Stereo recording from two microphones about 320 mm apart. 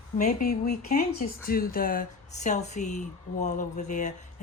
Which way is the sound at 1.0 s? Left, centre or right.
Left.